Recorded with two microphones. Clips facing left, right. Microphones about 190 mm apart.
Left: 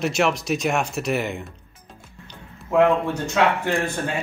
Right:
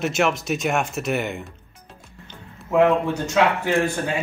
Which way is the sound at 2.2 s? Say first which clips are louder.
Right 1 dB; 5° right (ahead or behind).